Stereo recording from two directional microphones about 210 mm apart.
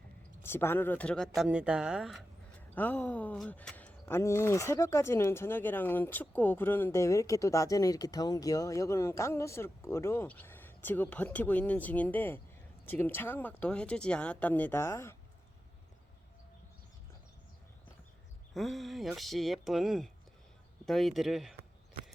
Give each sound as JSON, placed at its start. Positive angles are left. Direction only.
{"t": 0.4, "sound": "speech", "side_deg": 10}
{"t": 18.5, "sound": "speech", "side_deg": 0}